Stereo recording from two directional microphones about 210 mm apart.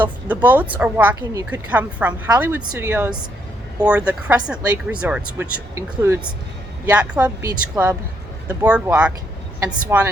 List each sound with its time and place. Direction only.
0.0 s speech: 10° right (ahead or behind)